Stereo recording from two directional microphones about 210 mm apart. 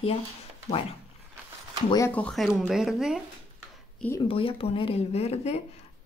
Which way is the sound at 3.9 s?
10° left (ahead or behind).